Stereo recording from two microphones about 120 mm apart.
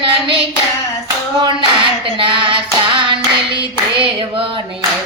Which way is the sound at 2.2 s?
45° right (ahead or behind).